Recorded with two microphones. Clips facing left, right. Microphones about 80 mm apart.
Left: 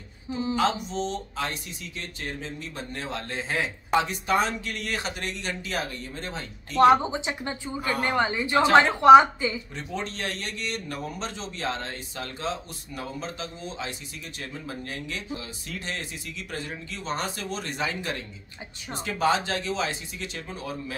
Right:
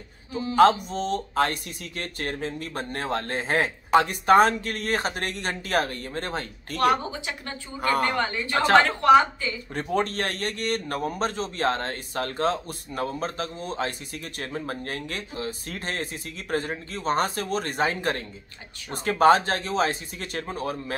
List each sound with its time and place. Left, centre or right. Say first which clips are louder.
0.6 s speech: right 9 dB; right
6.8 s a woman's voice: left 5 dB; left
7.8 s speech: right 5 dB; right
8.2 s a woman's voice: left 2 dB; centre
9.8 s speech: right 7 dB; right